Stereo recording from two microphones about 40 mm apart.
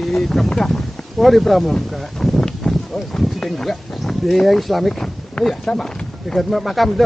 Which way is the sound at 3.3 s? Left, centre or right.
Centre.